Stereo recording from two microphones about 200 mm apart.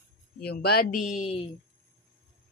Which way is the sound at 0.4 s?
50° left (ahead or behind).